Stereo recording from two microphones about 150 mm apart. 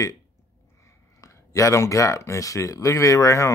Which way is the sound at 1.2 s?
20° left (ahead or behind).